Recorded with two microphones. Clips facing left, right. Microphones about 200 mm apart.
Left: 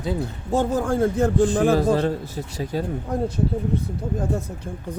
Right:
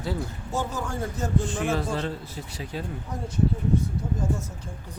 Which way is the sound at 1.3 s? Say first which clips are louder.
Left 5 dB; 35° left (ahead or behind).